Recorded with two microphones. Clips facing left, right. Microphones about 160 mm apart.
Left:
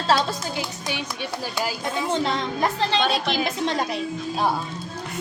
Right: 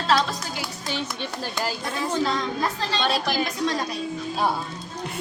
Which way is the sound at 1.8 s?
20° left (ahead or behind).